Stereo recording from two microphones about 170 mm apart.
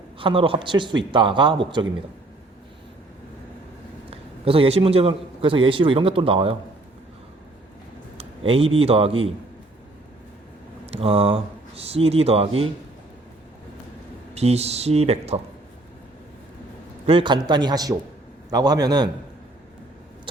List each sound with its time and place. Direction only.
0.2 s a man's voice: 30° right (ahead or behind)
4.1 s a man's voice: 35° right (ahead or behind)
8.2 s a man's voice: 35° right (ahead or behind)
10.9 s a man's voice: 35° right (ahead or behind)
14.3 s a man's voice: 40° right (ahead or behind)
17.1 s a man's voice: 30° right (ahead or behind)